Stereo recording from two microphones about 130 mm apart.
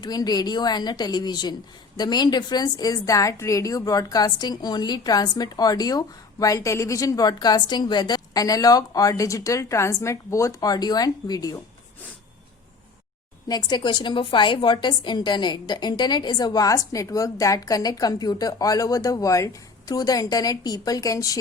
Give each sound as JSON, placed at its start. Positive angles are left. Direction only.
{"t": 0.0, "sound": "a woman's voice", "side_deg": 30}
{"t": 13.5, "sound": "a woman's voice", "side_deg": 30}